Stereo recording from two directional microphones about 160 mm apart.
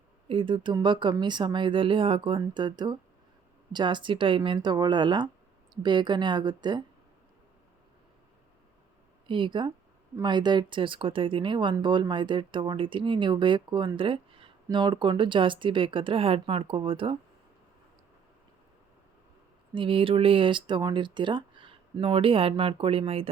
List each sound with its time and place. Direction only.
0.3 s speech: 30° right (ahead or behind)
9.2 s speech: 30° right (ahead or behind)
19.7 s speech: 35° right (ahead or behind)